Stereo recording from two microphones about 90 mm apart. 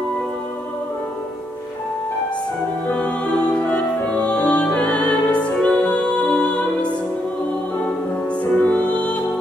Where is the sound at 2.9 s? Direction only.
15° left (ahead or behind).